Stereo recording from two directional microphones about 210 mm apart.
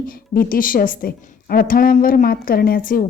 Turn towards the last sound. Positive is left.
turn(degrees=40)  # may be behind; listen again after turning